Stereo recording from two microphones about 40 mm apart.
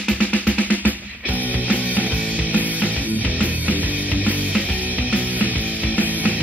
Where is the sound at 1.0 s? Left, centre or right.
Right.